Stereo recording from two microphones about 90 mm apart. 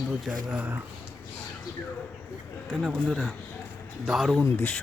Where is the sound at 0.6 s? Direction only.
20° right (ahead or behind).